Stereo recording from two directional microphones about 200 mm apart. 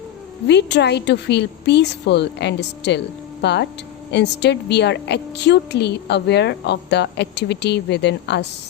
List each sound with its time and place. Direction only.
0.4 s a woman's voice: 60° left (ahead or behind)